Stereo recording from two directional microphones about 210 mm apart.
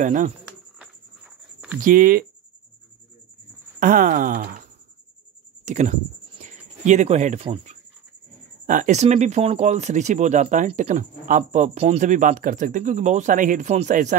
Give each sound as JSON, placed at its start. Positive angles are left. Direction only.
{"t": 0.0, "sound": "speech", "side_deg": -40}
{"t": 1.8, "sound": "speech", "side_deg": -40}
{"t": 3.8, "sound": "speech", "side_deg": -40}
{"t": 5.7, "sound": "a sound", "side_deg": -35}
{"t": 7.4, "sound": "speech", "side_deg": -25}
{"t": 8.6, "sound": "speech", "side_deg": -40}